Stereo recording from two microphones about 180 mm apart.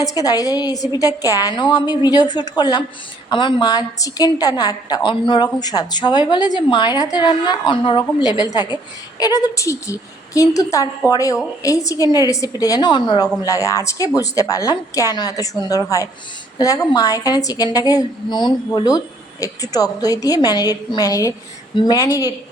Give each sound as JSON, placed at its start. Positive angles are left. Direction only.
{"t": 0.0, "sound": "a woman's voice", "side_deg": 20}